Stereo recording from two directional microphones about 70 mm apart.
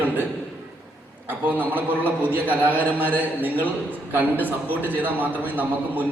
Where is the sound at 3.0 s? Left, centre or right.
Right.